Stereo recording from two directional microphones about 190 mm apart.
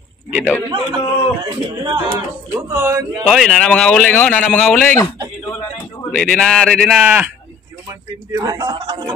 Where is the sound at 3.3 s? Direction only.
Centre (ahead or behind).